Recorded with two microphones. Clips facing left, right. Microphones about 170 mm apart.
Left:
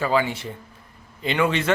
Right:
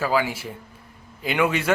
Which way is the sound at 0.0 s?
5° right (ahead or behind).